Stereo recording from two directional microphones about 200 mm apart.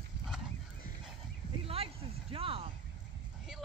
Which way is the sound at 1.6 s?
30° right (ahead or behind).